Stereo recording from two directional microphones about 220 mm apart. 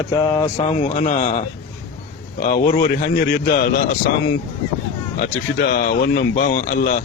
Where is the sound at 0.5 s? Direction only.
30° left (ahead or behind).